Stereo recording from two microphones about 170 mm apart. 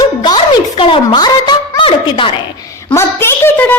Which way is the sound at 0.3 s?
30° left (ahead or behind).